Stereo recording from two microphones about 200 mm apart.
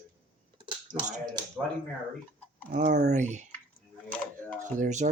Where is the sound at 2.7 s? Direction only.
45° right (ahead or behind).